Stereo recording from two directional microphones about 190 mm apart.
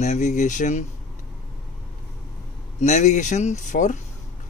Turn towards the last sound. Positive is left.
turn(degrees=40)  # may be behind; listen again after turning